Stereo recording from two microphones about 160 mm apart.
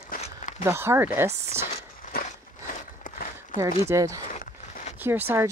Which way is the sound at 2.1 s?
60° left (ahead or behind).